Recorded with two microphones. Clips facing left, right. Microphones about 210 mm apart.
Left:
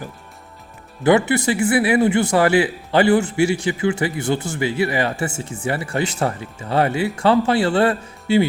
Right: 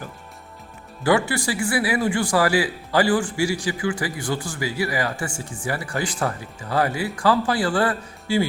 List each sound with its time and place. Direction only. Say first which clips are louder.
1.0 s a man's voice: left 5 dB; 20° left (ahead or behind)